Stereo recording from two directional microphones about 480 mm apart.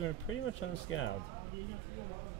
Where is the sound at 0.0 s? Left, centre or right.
Left.